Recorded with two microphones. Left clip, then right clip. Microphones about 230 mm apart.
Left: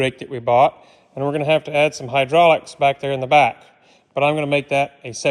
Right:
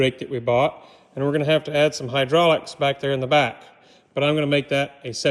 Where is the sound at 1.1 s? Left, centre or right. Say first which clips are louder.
Left 2 dB; centre.